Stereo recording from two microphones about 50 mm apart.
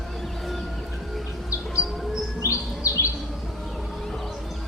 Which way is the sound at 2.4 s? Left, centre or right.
Left.